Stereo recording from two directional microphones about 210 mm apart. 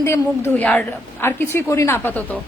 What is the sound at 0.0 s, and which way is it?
A woman's voice, 10° left (ahead or behind).